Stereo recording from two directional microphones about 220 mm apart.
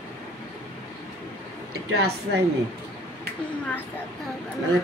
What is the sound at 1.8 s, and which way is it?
Speech, 45° right (ahead or behind).